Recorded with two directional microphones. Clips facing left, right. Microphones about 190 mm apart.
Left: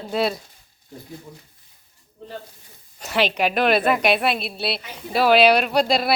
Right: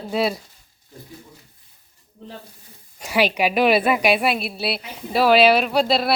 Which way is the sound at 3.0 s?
10° right (ahead or behind).